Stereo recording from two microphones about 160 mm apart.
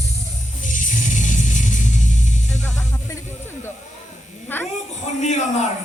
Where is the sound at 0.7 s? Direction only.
55° left (ahead or behind).